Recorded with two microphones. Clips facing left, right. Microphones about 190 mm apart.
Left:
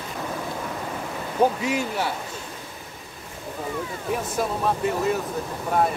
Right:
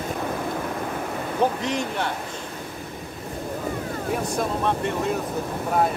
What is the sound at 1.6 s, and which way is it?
Speech, 5° left (ahead or behind).